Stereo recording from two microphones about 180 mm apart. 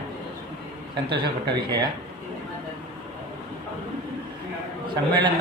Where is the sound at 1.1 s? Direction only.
25° right (ahead or behind).